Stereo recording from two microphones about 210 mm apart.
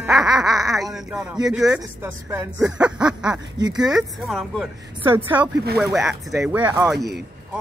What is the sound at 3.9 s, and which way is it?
Speech, centre (ahead or behind).